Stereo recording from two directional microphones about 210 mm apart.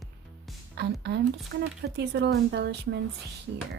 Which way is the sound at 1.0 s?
50° right (ahead or behind).